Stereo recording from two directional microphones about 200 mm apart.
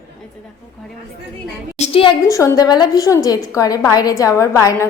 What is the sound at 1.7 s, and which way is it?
Speech, 30° left (ahead or behind).